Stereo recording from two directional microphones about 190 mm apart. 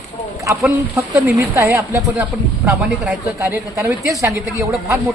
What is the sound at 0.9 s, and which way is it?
Speech, 15° right (ahead or behind).